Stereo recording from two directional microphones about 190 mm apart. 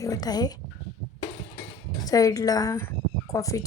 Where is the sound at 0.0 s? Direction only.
20° left (ahead or behind).